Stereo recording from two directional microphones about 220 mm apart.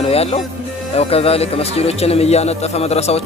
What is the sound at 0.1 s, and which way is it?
Music, 25° left (ahead or behind).